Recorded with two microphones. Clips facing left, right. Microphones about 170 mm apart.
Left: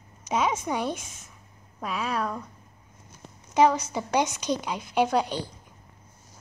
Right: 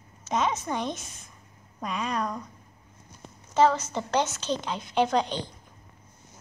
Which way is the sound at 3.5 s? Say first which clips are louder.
Left 1 dB; 15° left (ahead or behind).